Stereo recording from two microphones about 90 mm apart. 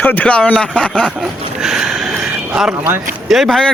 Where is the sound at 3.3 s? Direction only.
Centre (ahead or behind).